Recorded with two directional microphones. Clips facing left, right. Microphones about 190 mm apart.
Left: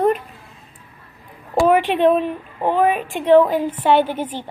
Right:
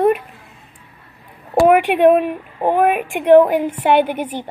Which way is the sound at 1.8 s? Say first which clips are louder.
Right 3 dB; 10° right (ahead or behind).